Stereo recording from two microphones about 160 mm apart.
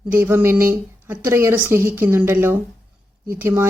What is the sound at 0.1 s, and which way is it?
Speech, 15° right (ahead or behind).